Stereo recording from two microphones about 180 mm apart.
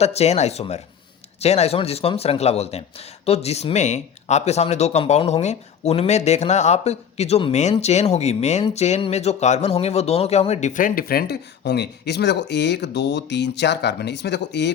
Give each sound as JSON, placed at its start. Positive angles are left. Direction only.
{"t": 0.0, "sound": "speech", "side_deg": 35}